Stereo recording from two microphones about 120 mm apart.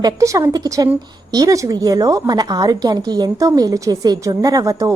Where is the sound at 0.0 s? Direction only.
25° right (ahead or behind).